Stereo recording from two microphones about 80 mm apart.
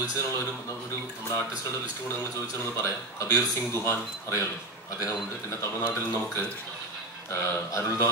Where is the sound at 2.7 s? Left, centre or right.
Left.